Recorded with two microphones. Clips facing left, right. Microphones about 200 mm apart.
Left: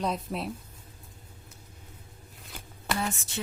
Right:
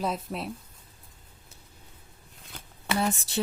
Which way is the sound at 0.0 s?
Centre (ahead or behind).